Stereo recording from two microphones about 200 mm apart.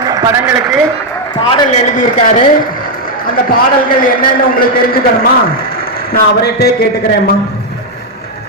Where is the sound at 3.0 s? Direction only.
45° left (ahead or behind).